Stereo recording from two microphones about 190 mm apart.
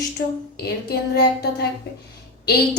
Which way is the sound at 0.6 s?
55° left (ahead or behind).